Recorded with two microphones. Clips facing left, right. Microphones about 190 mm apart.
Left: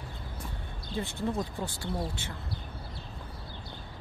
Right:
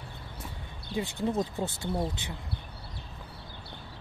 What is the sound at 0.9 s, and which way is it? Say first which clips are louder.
Speech: right 3 dB; 15° right (ahead or behind).